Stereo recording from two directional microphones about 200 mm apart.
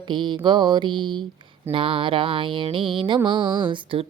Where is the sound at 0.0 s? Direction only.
25° right (ahead or behind).